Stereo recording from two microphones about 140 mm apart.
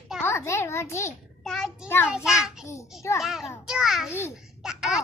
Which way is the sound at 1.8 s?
15° left (ahead or behind).